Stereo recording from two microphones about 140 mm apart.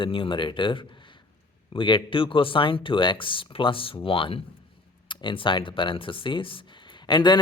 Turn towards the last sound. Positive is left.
turn(degrees=30)  # may be behind; listen again after turning